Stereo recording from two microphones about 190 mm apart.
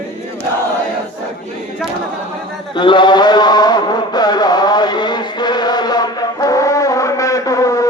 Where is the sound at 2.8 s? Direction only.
25° left (ahead or behind).